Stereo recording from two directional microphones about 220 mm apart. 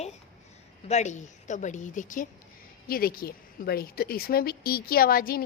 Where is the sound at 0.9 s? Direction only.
30° left (ahead or behind).